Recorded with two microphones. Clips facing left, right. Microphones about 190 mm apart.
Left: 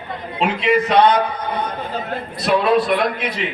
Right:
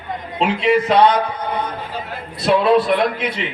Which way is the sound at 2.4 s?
25° right (ahead or behind).